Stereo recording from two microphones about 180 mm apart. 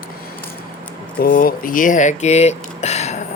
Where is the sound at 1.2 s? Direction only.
55° left (ahead or behind); by 3.1 s 40° left (ahead or behind).